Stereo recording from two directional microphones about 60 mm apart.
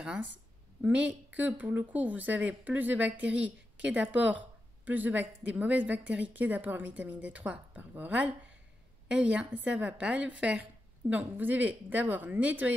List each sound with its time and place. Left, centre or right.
0.0 s speech: centre